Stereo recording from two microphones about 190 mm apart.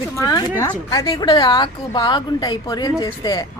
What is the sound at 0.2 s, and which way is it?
A woman's voice, 15° left (ahead or behind).